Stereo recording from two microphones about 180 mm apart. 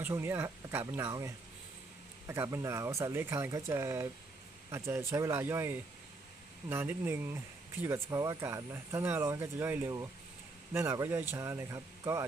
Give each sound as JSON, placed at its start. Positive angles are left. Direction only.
{"t": 0.0, "sound": "speech", "side_deg": -15}